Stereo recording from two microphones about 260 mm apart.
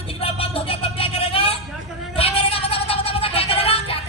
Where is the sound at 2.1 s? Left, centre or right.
Left.